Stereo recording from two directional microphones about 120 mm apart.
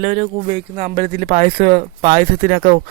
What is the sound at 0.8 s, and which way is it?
Speech, 65° right (ahead or behind).